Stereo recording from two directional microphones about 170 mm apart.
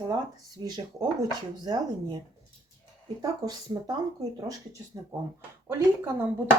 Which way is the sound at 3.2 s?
20° right (ahead or behind).